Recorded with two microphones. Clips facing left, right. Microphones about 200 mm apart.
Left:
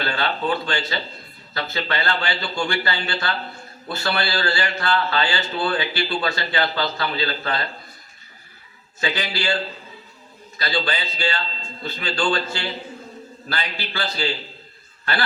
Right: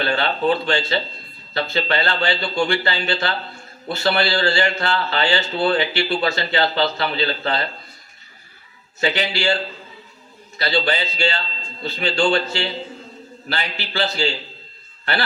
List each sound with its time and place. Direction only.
0.0 s a man's voice: 25° right (ahead or behind)
9.0 s a man's voice: 25° right (ahead or behind)
10.6 s a man's voice: 25° right (ahead or behind)